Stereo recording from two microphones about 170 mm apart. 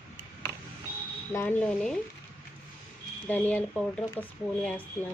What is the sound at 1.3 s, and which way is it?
Speech, 10° left (ahead or behind).